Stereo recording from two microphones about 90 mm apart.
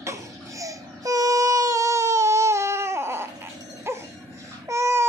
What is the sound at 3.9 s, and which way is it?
Dog, 30° right (ahead or behind).